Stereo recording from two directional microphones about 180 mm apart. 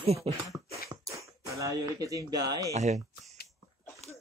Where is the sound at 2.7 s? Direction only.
40° right (ahead or behind).